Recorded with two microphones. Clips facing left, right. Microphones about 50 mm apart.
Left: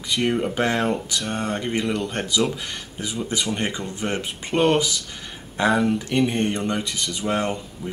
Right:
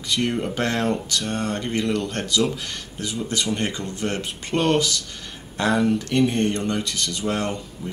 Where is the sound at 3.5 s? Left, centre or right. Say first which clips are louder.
Even; centre.